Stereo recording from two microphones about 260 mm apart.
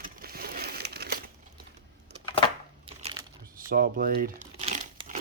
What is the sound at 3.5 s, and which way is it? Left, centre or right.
Crumpling, right.